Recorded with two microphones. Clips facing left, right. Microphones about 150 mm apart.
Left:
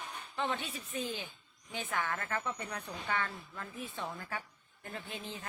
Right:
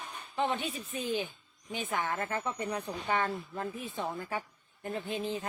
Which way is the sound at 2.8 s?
35° right (ahead or behind).